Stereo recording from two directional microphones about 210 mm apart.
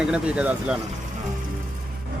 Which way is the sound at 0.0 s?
5° right (ahead or behind).